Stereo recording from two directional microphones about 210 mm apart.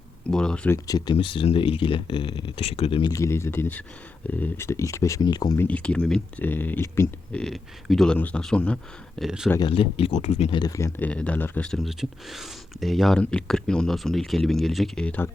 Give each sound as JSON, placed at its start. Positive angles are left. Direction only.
{"t": 0.3, "sound": "speech", "side_deg": 5}
{"t": 0.9, "sound": "speech", "side_deg": 20}
{"t": 5.6, "sound": "speech", "side_deg": 5}
{"t": 9.5, "sound": "speech", "side_deg": 20}